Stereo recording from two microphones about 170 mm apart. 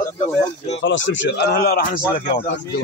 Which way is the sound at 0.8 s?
90° left.